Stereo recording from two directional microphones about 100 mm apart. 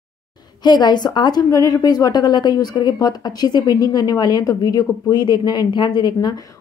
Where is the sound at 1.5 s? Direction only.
35° left (ahead or behind).